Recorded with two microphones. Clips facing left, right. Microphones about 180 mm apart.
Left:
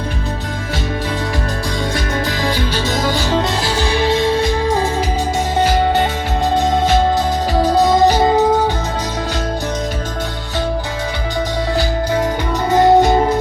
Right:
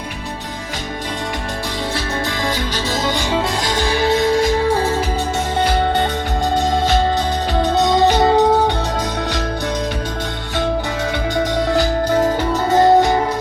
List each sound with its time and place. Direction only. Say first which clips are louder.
3.1 s music: left 2 dB; 15° right (ahead or behind)
3.8 s music: even; 30° left (ahead or behind)
5.5 s music: left 2 dB; 10° left (ahead or behind)
12.7 s music: left 2 dB; 20° left (ahead or behind)